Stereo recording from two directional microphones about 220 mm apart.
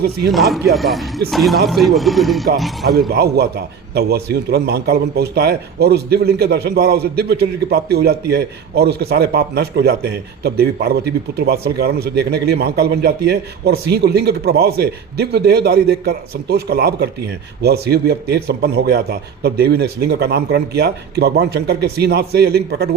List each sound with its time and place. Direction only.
0.3 s speech: centre (ahead or behind)
3.1 s a man's voice: 45° right (ahead or behind)